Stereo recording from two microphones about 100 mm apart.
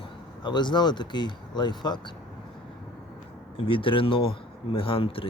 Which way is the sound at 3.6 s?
60° left (ahead or behind).